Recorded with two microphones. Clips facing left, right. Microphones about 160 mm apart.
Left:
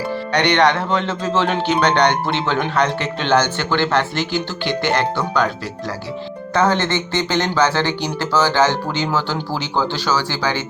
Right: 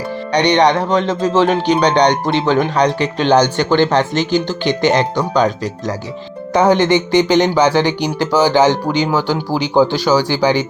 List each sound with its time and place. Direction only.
0.3 s speech: 15° right (ahead or behind)
6.5 s speech: 15° right (ahead or behind)